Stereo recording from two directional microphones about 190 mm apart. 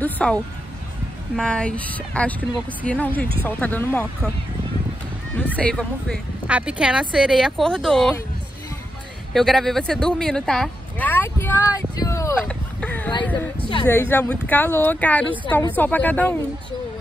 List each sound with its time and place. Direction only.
0.0 s speech: 5° left (ahead or behind)
5.4 s speech: 5° left (ahead or behind)
6.4 s speech: 5° right (ahead or behind)
9.3 s speech: centre (ahead or behind)
11.7 s a sound: 20° left (ahead or behind)
12.4 s a sound: 5° left (ahead or behind)
13.2 s speech: 10° left (ahead or behind)